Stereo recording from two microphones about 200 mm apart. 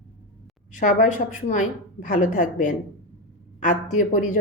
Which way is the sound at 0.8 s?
40° left (ahead or behind).